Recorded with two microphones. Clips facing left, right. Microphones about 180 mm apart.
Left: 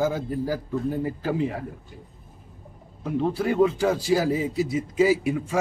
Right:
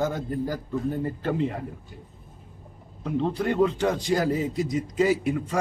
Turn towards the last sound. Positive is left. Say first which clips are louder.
# left 1 dB
turn(degrees=5)  # may be behind; listen again after turning